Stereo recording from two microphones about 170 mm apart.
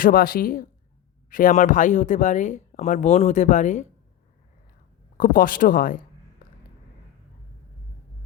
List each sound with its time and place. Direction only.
0.0 s speech: 60° left (ahead or behind)
5.1 s speech: 55° left (ahead or behind)